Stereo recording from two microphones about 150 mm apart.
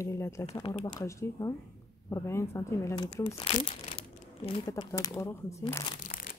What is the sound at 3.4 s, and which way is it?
Crumpling, 40° left (ahead or behind).